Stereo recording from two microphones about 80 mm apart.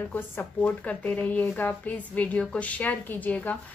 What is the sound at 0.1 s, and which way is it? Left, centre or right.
A woman's voice, left.